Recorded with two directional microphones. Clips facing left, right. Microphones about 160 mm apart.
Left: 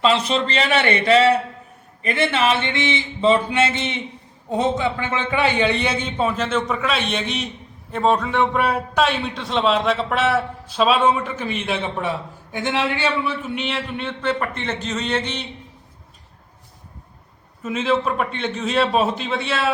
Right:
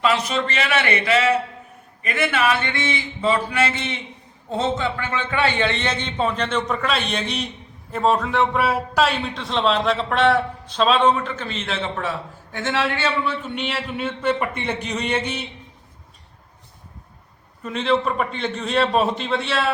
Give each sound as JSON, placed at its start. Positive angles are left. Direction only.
{"t": 0.0, "sound": "a man's voice", "side_deg": 30}
{"t": 17.6, "sound": "a man's voice", "side_deg": 5}